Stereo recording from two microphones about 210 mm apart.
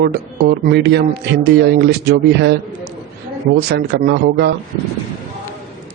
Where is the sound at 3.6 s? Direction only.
50° right (ahead or behind).